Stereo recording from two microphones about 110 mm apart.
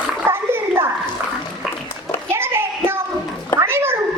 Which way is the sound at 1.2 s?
20° right (ahead or behind).